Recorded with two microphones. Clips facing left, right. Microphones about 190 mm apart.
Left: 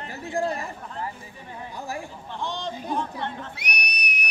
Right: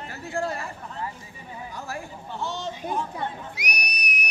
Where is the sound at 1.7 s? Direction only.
15° left (ahead or behind).